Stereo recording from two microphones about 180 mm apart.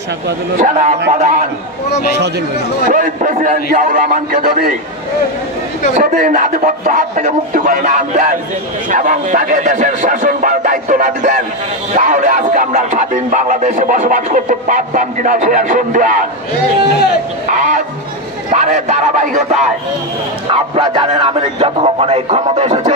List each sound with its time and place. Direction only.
0.6 s speech: 45° right (ahead or behind)
2.9 s speech: 45° right (ahead or behind)
5.9 s speech: 45° right (ahead or behind)
17.5 s speech: 45° right (ahead or behind)
20.5 s speech: 30° right (ahead or behind)